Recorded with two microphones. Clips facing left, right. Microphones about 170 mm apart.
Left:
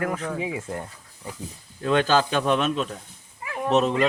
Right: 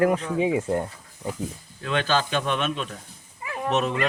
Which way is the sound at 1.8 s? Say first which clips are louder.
Left 4 dB; 40° left (ahead or behind).